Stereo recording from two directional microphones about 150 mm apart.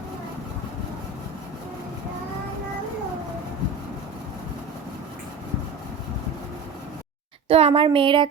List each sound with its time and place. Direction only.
7.4 s speech: 40° right (ahead or behind)